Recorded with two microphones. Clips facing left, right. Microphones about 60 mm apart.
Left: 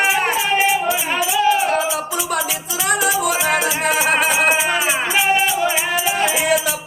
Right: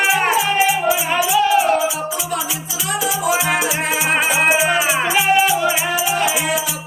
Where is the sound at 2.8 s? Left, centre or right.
Left.